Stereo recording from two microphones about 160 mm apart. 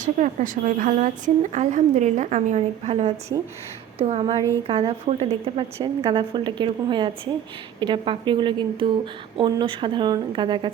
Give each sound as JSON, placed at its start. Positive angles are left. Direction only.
{"t": 0.0, "sound": "a woman's voice", "side_deg": -50}